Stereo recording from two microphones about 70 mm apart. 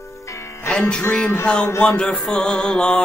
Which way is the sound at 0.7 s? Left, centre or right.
Centre.